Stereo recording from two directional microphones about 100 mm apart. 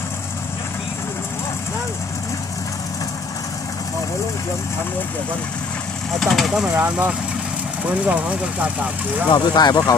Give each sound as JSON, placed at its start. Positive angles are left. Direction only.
{"t": 6.1, "sound": "speech", "side_deg": 0}
{"t": 6.7, "sound": "speech", "side_deg": -15}
{"t": 9.3, "sound": "speech", "side_deg": 45}